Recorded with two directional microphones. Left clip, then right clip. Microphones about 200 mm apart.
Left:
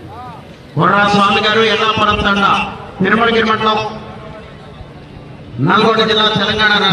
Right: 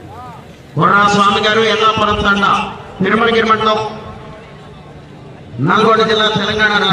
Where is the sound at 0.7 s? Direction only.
Centre (ahead or behind).